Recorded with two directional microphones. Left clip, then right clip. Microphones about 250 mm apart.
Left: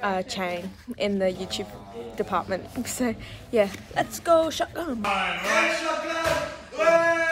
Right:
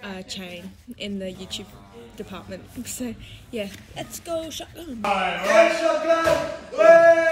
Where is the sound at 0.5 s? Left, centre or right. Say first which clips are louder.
Left 7 dB; left.